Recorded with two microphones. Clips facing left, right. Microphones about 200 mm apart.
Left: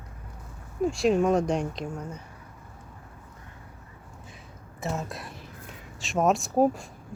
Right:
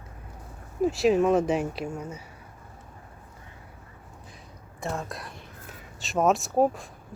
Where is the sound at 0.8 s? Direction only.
5° right (ahead or behind).